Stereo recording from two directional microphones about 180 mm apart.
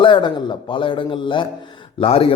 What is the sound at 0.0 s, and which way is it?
A man's voice, 25° left (ahead or behind).